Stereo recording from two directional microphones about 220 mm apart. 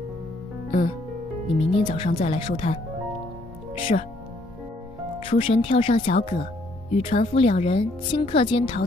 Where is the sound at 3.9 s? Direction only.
35° left (ahead or behind).